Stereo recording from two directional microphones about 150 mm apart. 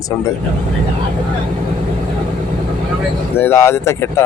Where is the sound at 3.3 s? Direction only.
15° left (ahead or behind).